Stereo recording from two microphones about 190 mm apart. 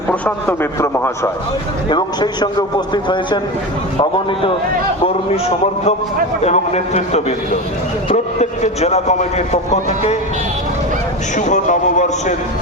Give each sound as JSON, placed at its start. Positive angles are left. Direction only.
{"t": 0.1, "sound": "a man's voice", "side_deg": 10}
{"t": 6.4, "sound": "a man's voice", "side_deg": 35}
{"t": 11.3, "sound": "a man's voice", "side_deg": 40}